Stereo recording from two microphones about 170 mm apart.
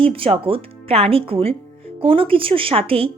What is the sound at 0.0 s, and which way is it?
Speech, 35° right (ahead or behind).